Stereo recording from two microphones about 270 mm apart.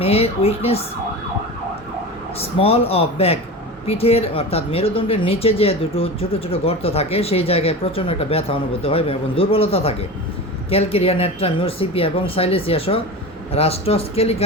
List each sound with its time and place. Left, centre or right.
0.0 s speech: left
2.4 s speech: left